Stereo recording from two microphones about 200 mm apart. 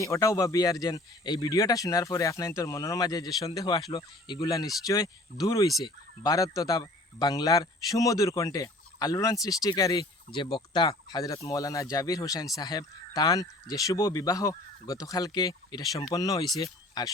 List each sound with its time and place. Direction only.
0.0 s speech: 15° left (ahead or behind)